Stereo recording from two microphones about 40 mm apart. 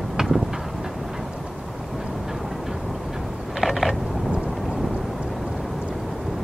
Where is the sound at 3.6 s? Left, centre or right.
Centre.